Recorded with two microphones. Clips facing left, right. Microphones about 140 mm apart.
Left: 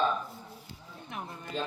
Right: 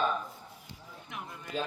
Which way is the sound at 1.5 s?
5° right (ahead or behind).